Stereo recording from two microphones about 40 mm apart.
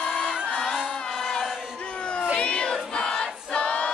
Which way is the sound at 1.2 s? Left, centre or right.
Centre.